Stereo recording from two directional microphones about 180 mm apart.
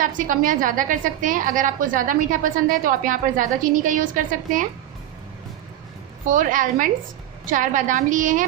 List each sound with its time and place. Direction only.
0.0 s a woman's voice: 45° right (ahead or behind)
6.2 s a woman's voice: 45° right (ahead or behind)